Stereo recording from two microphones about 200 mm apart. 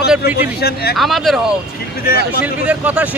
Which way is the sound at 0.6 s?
55° left (ahead or behind).